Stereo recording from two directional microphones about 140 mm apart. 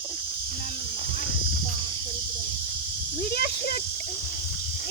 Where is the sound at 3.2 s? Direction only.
90° left.